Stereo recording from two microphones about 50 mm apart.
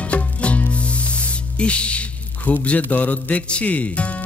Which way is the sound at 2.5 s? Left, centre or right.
Left.